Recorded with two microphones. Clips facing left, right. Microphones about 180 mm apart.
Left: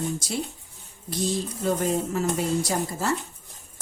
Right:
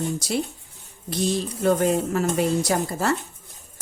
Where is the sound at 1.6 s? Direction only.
65° right (ahead or behind).